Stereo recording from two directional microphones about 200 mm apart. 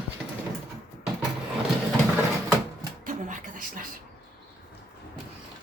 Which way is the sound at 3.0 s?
40° right (ahead or behind).